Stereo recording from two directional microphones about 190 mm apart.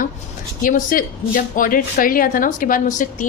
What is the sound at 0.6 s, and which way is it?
A woman's voice, 45° left (ahead or behind).